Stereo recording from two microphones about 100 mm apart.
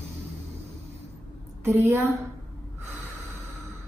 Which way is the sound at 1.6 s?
20° right (ahead or behind).